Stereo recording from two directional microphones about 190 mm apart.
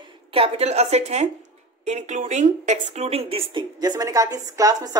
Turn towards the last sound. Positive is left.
turn(degrees=-20)  # may be behind; listen again after turning